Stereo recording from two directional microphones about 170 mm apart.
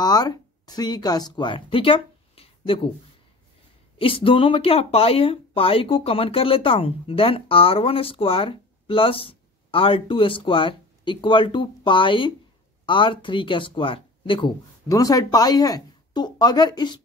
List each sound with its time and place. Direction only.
0.0 s speech: 25° left (ahead or behind)
4.0 s speech: 30° left (ahead or behind)